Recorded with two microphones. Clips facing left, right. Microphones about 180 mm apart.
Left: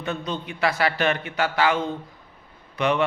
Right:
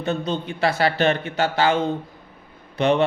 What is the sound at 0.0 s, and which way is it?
A man's voice, 25° right (ahead or behind).